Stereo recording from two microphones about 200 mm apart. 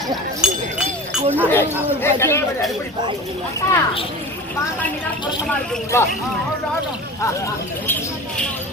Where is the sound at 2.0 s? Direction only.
10° left (ahead or behind).